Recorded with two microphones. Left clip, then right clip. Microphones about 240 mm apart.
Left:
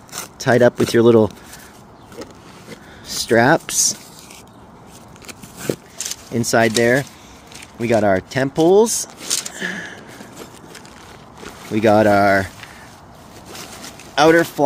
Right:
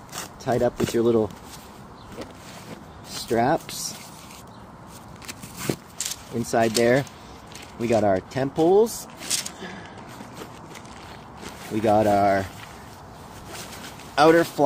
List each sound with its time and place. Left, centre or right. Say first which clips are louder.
0.4 s speech: left 9 dB; left
3.1 s speech: left 8 dB; left
5.2 s biting: left 5 dB; centre
6.4 s speech: left 6 dB; left
6.8 s speech: left 4 dB; centre; by 8.9 s left
9.6 s a sound: left 12 dB; left
11.7 s speech: left 6 dB; left
14.1 s speech: left 4 dB; centre